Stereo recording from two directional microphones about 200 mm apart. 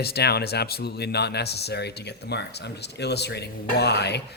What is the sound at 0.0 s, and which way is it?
A man's voice, 55° left (ahead or behind).